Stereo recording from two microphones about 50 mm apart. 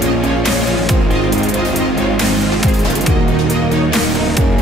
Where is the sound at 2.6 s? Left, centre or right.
Centre.